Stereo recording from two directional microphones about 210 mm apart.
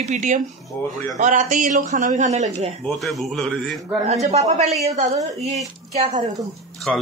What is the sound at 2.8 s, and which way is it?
Speech, centre (ahead or behind).